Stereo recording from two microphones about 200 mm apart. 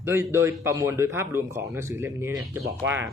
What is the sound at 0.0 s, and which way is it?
Speech, 10° right (ahead or behind).